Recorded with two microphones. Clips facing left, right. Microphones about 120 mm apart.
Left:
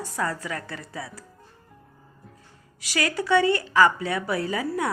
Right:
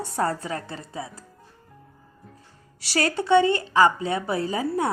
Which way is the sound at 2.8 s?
30° right (ahead or behind).